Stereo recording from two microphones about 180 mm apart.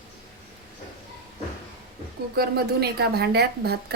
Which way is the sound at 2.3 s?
60° right (ahead or behind).